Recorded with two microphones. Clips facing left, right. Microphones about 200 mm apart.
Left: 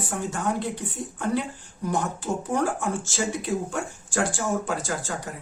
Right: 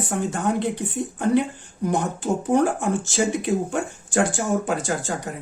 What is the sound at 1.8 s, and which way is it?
Speech, 20° right (ahead or behind).